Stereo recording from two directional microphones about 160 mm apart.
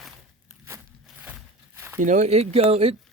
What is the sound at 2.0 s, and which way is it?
Speech, 50° right (ahead or behind).